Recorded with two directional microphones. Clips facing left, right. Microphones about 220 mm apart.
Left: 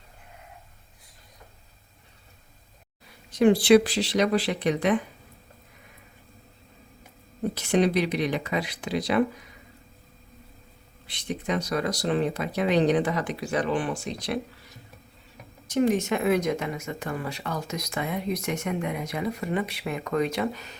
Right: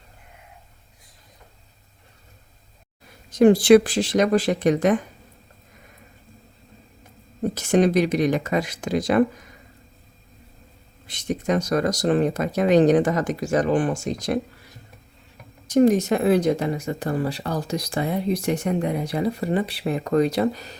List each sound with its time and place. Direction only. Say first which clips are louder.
3.3 s speech: right 4 dB; 45° right (ahead or behind)
7.5 s speech: right 4 dB; 45° right (ahead or behind)
11.0 s speech: right 6 dB; 45° right (ahead or behind)
15.7 s speech: right 6 dB; 40° right (ahead or behind)